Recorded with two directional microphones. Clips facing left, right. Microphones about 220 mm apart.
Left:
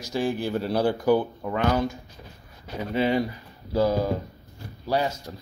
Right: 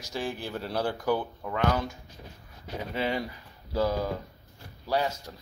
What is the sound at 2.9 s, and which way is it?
Speech, 5° left (ahead or behind).